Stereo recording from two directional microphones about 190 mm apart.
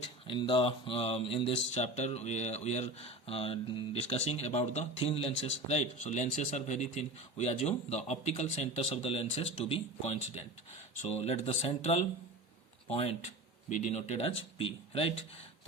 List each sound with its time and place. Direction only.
0.3 s speech: 25° left (ahead or behind)